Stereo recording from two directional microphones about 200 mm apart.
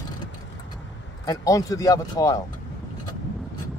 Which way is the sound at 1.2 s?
15° left (ahead or behind).